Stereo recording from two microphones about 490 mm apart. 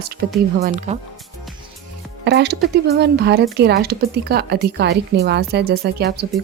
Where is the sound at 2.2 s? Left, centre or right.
Centre.